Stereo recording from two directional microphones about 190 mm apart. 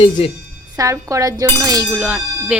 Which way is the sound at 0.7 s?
15° right (ahead or behind).